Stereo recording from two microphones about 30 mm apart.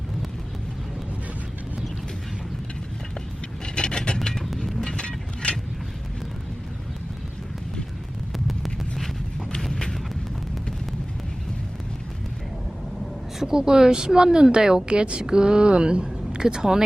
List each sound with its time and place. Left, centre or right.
3.8 s mechanisms: left
4.5 s vehicle: centre
5.0 s mechanisms: left
8.3 s a sound: centre
9.6 s a sound: centre
13.4 s speech: right
14.8 s a woman's voice: right
15.2 s speech: right